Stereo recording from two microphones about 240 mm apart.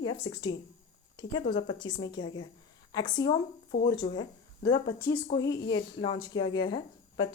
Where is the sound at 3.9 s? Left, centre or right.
Centre.